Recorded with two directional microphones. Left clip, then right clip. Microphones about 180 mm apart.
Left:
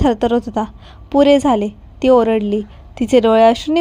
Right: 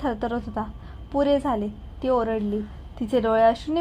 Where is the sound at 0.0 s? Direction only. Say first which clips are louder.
Left 12 dB; 30° left (ahead or behind).